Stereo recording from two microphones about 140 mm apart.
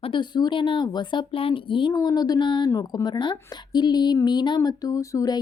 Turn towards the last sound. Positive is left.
turn(degrees=25)  # may be behind; listen again after turning